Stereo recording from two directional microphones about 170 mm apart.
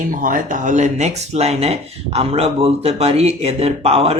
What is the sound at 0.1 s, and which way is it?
Speech, 50° right (ahead or behind).